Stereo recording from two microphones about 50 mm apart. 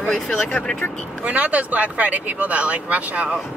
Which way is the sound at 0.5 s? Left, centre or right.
Centre.